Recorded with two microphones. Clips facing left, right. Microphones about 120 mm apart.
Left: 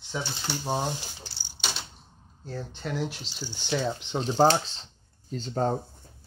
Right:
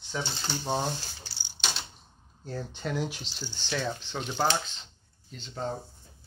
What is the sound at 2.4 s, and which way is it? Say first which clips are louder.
Speech: even; centre (ahead or behind).